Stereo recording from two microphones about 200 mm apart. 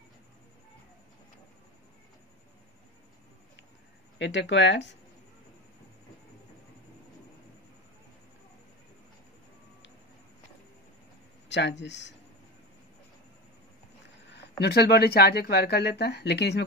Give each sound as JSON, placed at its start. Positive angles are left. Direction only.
{"t": 4.2, "sound": "speech", "side_deg": 65}
{"t": 11.4, "sound": "speech", "side_deg": 60}
{"t": 14.6, "sound": "speech", "side_deg": 55}